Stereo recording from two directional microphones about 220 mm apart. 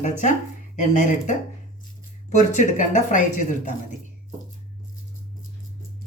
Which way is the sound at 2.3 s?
35° left (ahead or behind).